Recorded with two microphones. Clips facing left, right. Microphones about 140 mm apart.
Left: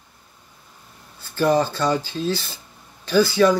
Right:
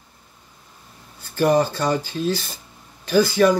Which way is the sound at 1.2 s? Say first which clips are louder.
Right 1 dB; 45° right (ahead or behind).